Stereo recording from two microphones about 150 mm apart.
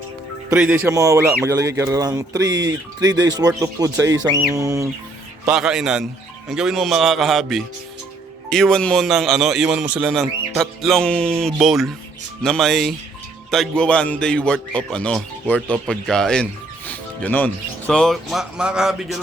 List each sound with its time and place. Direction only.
0.5 s speech: 10° right (ahead or behind)
5.5 s speech: 5° right (ahead or behind)